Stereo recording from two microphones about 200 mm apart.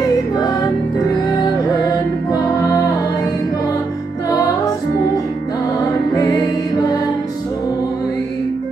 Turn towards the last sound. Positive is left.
turn(degrees=20)  # may be behind; listen again after turning